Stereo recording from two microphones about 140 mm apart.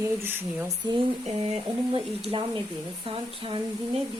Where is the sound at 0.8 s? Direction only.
40° right (ahead or behind).